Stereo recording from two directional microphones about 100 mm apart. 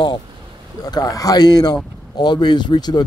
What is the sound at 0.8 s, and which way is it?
A man's voice, 40° left (ahead or behind).